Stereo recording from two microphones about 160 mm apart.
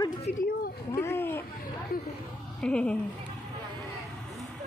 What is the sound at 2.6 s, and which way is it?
Speech, 5° left (ahead or behind).